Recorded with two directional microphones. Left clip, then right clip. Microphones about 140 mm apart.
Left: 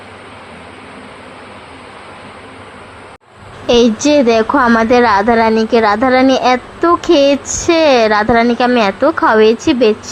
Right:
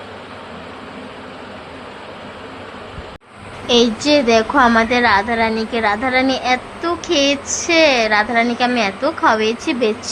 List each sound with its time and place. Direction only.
3.7 s a woman's voice: 35° left (ahead or behind)